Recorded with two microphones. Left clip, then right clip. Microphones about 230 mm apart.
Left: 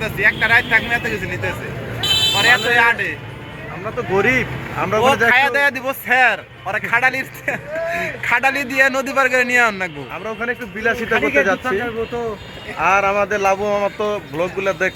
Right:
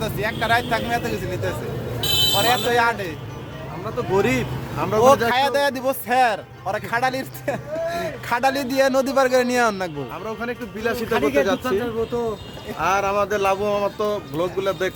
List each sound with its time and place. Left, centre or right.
0.0 s speech: right
2.4 s speech: right
4.1 s speech: centre
5.3 s speech: centre
10.2 s speech: centre
12.8 s speech: centre